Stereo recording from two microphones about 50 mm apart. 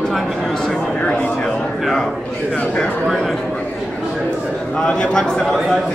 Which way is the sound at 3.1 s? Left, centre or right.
Centre.